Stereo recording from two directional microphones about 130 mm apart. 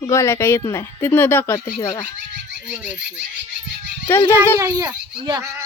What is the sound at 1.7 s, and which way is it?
Speech, 30° left (ahead or behind).